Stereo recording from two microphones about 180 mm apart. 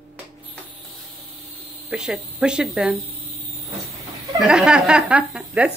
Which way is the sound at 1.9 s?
5° right (ahead or behind).